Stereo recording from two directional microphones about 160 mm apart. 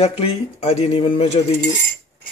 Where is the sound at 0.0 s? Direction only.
40° left (ahead or behind).